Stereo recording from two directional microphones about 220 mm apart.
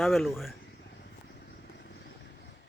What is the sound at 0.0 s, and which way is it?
Speech, centre (ahead or behind).